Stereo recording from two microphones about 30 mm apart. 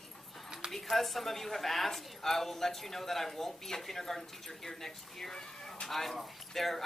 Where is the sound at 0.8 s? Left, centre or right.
Centre.